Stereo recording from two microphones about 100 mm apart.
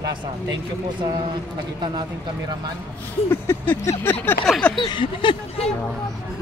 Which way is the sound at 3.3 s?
25° left (ahead or behind).